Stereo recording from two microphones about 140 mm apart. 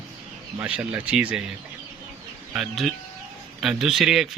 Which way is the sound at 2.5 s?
Centre (ahead or behind).